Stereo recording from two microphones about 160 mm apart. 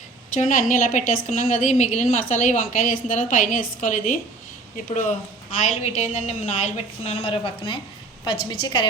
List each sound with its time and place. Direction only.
0.3 s a woman's voice: 55° left (ahead or behind)
5.5 s a woman's voice: 50° left (ahead or behind); by 8.9 s 30° left (ahead or behind)